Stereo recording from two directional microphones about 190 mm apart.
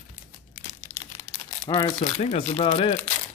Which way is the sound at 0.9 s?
15° left (ahead or behind).